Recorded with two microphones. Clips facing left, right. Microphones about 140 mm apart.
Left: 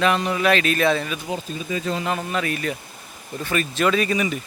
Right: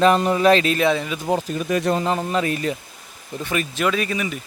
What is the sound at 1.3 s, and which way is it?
Speech, 75° right (ahead or behind).